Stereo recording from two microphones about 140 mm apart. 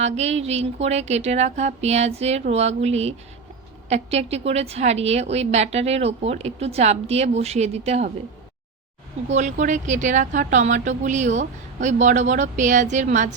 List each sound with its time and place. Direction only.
0.0 s a woman's voice: 50° right (ahead or behind)
9.3 s a woman's voice: 60° right (ahead or behind)